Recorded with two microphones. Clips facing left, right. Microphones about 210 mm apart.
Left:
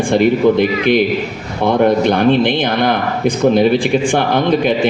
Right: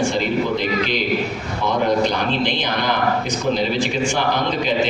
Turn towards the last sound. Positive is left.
turn(degrees=55)  # may be behind; listen again after turning